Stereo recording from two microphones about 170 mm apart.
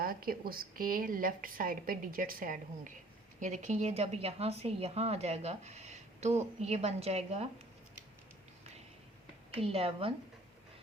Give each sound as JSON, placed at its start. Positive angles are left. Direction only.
{"t": 0.0, "sound": "a woman's voice", "side_deg": -60}
{"t": 9.6, "sound": "speech", "side_deg": -35}